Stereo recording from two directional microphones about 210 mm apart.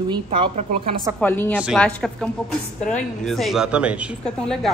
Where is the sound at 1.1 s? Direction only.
10° left (ahead or behind).